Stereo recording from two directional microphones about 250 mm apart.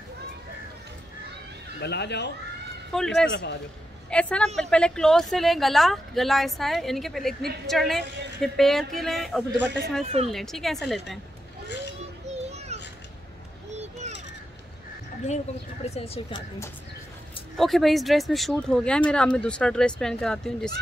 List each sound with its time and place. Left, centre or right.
1.8 s speech: left
2.9 s speech: centre
3.3 s speech: left
4.1 s speech: centre
10.0 s a woman's voice: right
10.3 s speech: centre
13.7 s a sound: right
15.9 s speech: centre
17.6 s speech: centre